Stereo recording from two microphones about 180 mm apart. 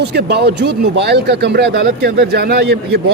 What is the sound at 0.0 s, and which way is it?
Speech, 65° right (ahead or behind).